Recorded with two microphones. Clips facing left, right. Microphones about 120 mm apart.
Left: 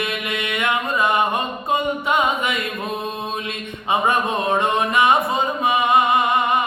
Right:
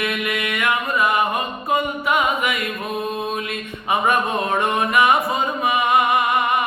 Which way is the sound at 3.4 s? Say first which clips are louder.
Even; 25° left (ahead or behind).